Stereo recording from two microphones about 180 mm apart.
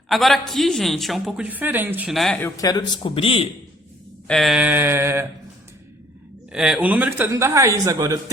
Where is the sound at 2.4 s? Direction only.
20° left (ahead or behind).